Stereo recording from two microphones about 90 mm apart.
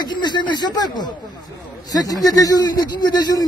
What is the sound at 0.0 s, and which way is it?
A man's voice, 55° left (ahead or behind).